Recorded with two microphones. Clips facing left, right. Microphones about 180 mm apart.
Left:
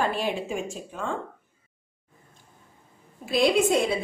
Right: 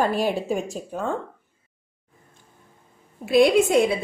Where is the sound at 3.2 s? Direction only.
60° right (ahead or behind).